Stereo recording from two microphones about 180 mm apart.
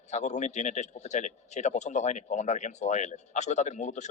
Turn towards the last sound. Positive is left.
turn(degrees=40)  # may be behind; listen again after turning